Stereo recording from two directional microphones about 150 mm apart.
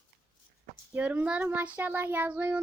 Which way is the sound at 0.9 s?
10° right (ahead or behind).